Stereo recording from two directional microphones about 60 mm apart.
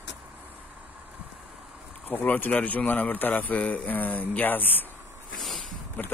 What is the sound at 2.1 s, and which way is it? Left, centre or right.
A man's voice, left.